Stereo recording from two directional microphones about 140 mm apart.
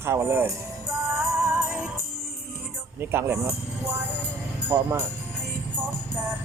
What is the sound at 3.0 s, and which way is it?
Speech, 15° right (ahead or behind).